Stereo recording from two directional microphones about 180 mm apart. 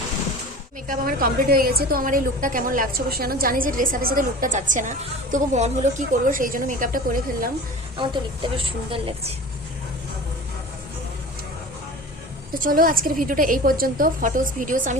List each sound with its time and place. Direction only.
0.9 s a woman's voice: 55° right (ahead or behind)
7.9 s a woman's voice: 25° right (ahead or behind)
12.5 s a woman's voice: 50° right (ahead or behind)